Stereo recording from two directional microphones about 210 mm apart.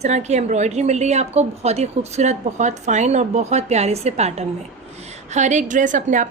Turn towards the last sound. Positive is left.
turn(degrees=-35)  # may be behind; listen again after turning